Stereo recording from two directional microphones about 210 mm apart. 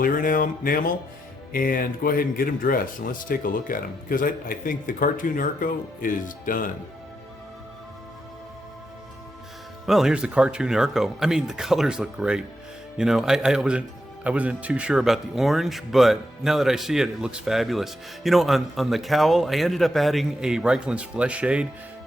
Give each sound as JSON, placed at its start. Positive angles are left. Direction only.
{"t": 0.0, "sound": "speech", "side_deg": 40}
{"t": 9.8, "sound": "speech", "side_deg": 0}